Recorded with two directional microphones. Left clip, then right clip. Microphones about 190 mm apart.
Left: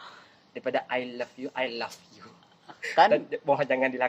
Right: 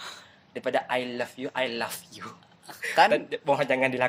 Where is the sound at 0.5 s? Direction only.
25° right (ahead or behind).